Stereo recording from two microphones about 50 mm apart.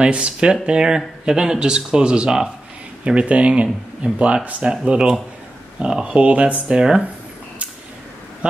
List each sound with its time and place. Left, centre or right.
0.0 s speech: centre
6.0 s speech: right